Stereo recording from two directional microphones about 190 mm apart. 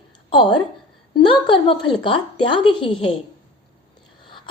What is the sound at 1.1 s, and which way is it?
A woman's voice, 25° left (ahead or behind).